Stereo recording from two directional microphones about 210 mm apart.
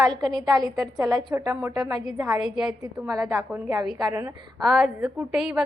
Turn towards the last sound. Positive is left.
turn(degrees=-5)  # may be behind; listen again after turning